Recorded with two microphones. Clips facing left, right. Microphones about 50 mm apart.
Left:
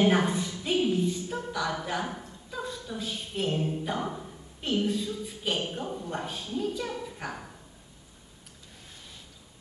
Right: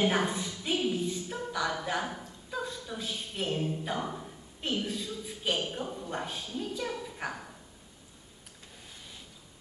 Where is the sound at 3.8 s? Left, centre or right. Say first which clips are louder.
Left 2 dB; centre.